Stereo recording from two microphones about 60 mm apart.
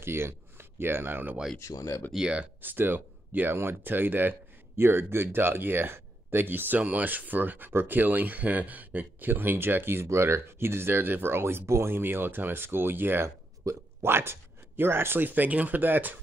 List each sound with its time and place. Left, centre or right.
0.0 s speech: right
1.7 s speech: left
2.1 s speech: centre
2.6 s speech: right
10.0 s speech: right
13.7 s speech: right
14.0 s speech: right